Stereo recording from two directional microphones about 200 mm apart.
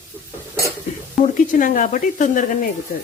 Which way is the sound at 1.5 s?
40° left (ahead or behind).